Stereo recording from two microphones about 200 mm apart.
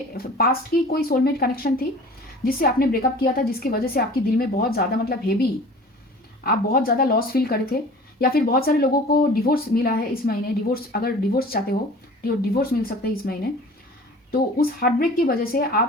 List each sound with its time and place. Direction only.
0.1 s speech: 50° left (ahead or behind)